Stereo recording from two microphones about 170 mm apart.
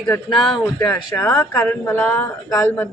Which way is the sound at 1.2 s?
10° left (ahead or behind).